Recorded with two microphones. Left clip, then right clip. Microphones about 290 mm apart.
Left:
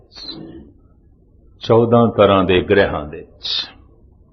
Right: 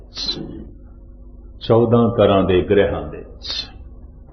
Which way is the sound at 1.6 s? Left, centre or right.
Left.